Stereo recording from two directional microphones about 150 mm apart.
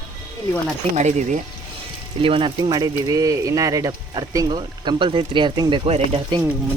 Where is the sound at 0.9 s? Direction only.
50° right (ahead or behind).